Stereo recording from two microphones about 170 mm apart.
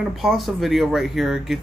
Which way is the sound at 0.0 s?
Centre (ahead or behind).